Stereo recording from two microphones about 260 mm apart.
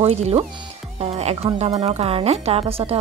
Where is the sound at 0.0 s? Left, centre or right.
Right.